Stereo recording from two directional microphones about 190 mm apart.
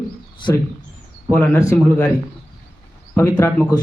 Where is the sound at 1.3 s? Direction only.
10° left (ahead or behind).